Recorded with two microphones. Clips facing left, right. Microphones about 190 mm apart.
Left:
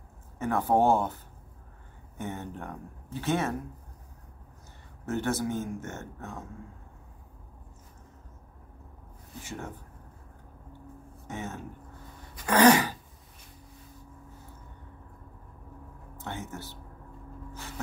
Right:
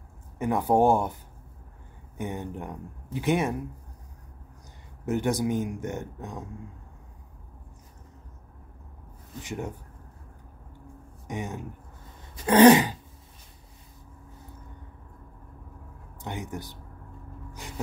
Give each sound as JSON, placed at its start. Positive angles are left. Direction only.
{"t": 0.4, "sound": "a man's voice", "side_deg": -15}
{"t": 5.0, "sound": "a man's voice", "side_deg": -15}
{"t": 9.4, "sound": "a man's voice", "side_deg": -15}
{"t": 11.2, "sound": "a man's voice", "side_deg": -15}
{"t": 12.4, "sound": "throat clearing", "side_deg": -20}
{"t": 16.2, "sound": "a man's voice", "side_deg": -15}
{"t": 17.6, "sound": "gasp", "side_deg": -15}